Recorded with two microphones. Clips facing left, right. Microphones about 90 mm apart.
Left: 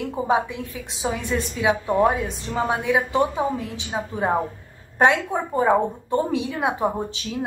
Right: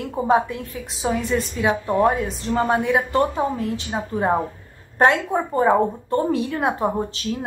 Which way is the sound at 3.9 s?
5° right (ahead or behind).